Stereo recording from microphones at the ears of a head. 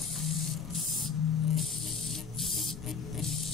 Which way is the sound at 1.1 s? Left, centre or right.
Left.